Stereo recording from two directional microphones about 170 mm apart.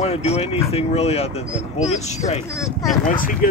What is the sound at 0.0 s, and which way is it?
Speech, 35° left (ahead or behind).